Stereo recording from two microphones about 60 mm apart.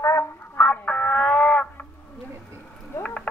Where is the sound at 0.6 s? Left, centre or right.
Left.